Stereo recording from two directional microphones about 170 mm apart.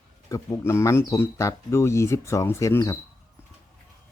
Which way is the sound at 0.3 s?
20° left (ahead or behind).